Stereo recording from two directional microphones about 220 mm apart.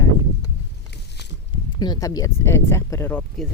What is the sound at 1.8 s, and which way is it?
Speech, 15° left (ahead or behind).